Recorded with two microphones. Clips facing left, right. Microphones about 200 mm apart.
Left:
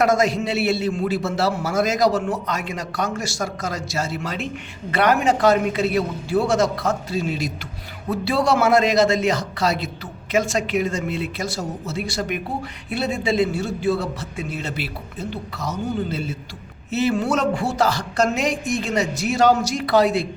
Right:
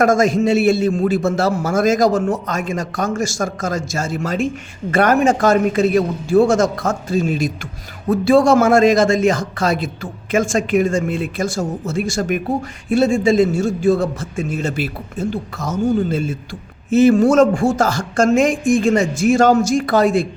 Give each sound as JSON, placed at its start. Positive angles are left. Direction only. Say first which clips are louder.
{"t": 0.0, "sound": "a man's voice", "louder": "right 5 dB", "side_deg": -45}